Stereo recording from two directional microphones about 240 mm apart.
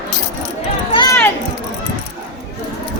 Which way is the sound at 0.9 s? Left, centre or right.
Centre.